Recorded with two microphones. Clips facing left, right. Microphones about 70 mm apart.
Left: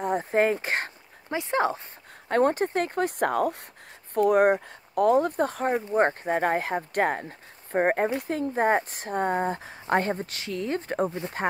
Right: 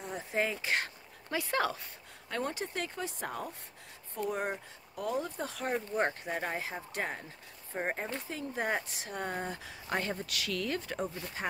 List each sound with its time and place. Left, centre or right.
0.0 s a sound: left
1.3 s speech: left
2.2 s speech: left
5.7 s speech: left
5.9 s a woman's voice: left